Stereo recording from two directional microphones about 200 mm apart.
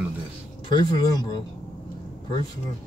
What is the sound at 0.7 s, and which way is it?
Speech, 20° left (ahead or behind).